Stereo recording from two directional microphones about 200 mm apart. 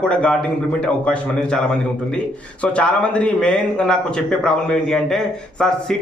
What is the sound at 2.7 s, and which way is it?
Speech, 5° left (ahead or behind).